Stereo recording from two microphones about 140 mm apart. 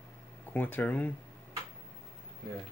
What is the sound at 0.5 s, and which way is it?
Speech, 10° left (ahead or behind).